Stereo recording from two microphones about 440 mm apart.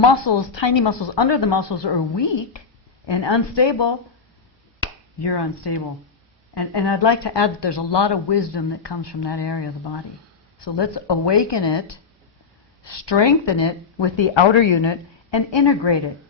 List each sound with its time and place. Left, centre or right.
0.1 s speech: left
5.2 s speech: left